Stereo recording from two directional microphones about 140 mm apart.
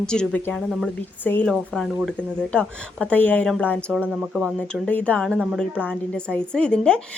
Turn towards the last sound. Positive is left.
turn(degrees=5)  # may be behind; listen again after turning